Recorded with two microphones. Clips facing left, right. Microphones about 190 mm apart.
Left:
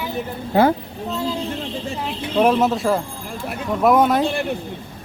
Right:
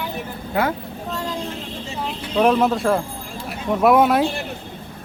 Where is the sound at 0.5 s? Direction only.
30° left (ahead or behind).